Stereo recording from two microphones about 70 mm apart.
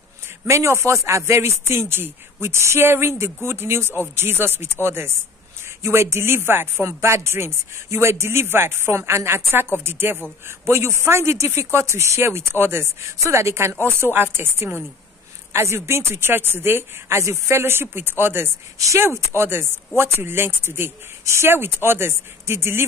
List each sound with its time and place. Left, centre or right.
0.5 s chopping: right
18.8 s chopping: right